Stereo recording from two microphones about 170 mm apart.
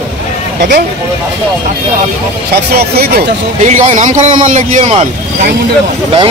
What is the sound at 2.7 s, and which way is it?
Speech, 65° right (ahead or behind).